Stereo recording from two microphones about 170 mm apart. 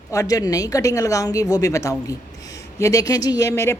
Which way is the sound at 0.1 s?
20° left (ahead or behind).